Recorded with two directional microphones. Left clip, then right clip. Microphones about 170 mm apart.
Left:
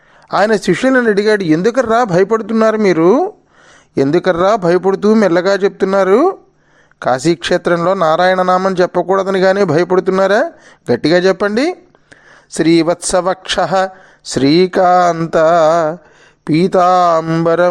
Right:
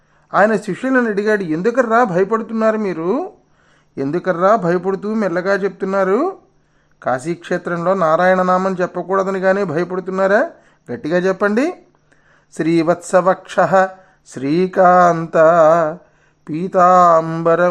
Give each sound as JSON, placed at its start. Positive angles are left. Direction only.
{"t": 0.3, "sound": "speech", "side_deg": 35}
{"t": 11.1, "sound": "speech", "side_deg": 25}
{"t": 14.8, "sound": "mantra", "side_deg": 20}
{"t": 16.4, "sound": "speech", "side_deg": 35}